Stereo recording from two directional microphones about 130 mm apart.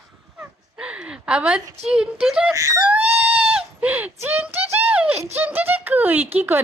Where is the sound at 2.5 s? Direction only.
25° right (ahead or behind).